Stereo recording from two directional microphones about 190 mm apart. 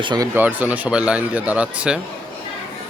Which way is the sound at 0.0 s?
25° right (ahead or behind).